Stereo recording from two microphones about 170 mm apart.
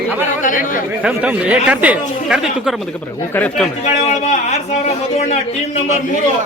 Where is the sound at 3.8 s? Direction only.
40° left (ahead or behind).